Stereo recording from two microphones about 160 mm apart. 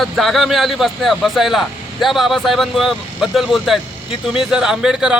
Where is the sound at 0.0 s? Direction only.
Centre (ahead or behind).